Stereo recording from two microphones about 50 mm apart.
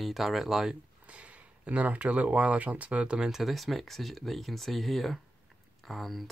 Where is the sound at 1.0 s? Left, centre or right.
Right.